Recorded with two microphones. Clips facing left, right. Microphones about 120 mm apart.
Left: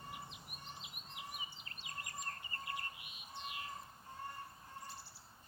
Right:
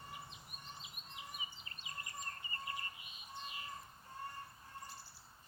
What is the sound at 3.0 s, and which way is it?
Bird, 75° left (ahead or behind).